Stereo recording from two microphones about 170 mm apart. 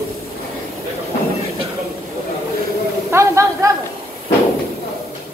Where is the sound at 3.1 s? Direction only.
15° right (ahead or behind).